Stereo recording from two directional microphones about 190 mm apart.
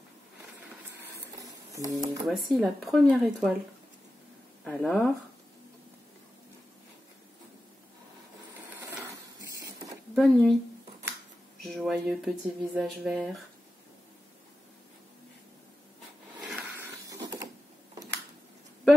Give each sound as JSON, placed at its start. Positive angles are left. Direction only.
{"t": 1.4, "sound": "a sound", "side_deg": -15}
{"t": 2.4, "sound": "speech", "side_deg": 0}
{"t": 4.6, "sound": "speech", "side_deg": 5}
{"t": 8.7, "sound": "mechanisms", "side_deg": -15}
{"t": 10.1, "sound": "speech", "side_deg": 0}
{"t": 11.6, "sound": "speech", "side_deg": 0}
{"t": 16.3, "sound": "a sound", "side_deg": 0}